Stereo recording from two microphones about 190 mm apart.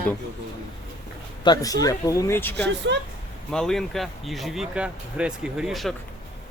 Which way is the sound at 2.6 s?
65° right (ahead or behind).